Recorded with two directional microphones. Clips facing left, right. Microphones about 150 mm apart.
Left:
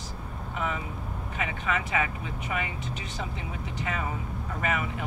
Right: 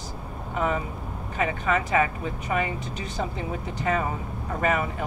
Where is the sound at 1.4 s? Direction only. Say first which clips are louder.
Right 6 dB; 40° right (ahead or behind).